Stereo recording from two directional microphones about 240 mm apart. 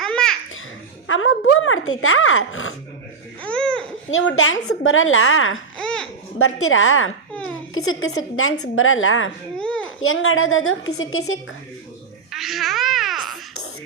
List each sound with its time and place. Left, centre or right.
0.0 s babbling: centre
1.0 s speech: left
3.4 s babbling: centre
4.1 s speech: left
5.7 s babbling: centre
6.4 s speech: left
9.6 s a sound: centre
10.0 s speech: left
12.3 s babbling: centre